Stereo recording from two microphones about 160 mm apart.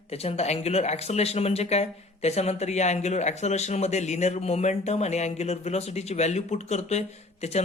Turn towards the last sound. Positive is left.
turn(degrees=45)  # may be behind; listen again after turning